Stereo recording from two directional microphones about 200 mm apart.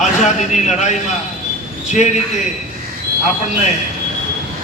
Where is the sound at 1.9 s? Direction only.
35° left (ahead or behind).